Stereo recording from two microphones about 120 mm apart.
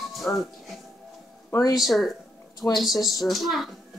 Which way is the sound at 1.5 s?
30° left (ahead or behind).